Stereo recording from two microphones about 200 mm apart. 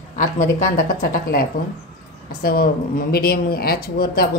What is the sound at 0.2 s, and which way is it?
Speech, 40° left (ahead or behind).